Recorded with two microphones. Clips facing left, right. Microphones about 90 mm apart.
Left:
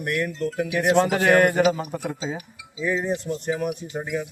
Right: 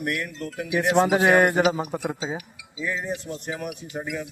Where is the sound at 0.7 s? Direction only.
15° right (ahead or behind).